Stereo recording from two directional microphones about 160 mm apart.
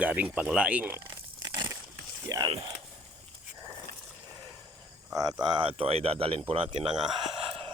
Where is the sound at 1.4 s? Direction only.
25° right (ahead or behind).